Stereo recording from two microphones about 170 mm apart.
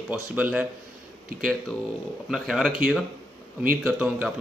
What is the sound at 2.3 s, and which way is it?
Speech, centre (ahead or behind).